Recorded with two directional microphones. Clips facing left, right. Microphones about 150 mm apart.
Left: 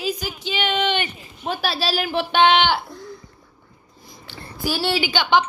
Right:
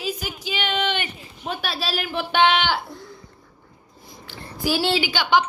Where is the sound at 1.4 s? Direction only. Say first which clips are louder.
Left 4 dB; 30° left (ahead or behind).